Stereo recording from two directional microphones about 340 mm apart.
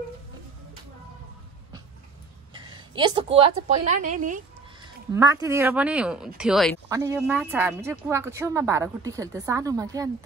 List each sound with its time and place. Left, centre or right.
2.5 s a woman's voice: centre
5.1 s a woman's voice: centre